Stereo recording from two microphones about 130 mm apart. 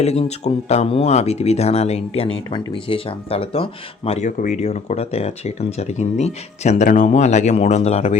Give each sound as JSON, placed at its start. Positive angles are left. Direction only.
{"t": 0.0, "sound": "speech", "side_deg": 55}
{"t": 4.3, "sound": "speech", "side_deg": 75}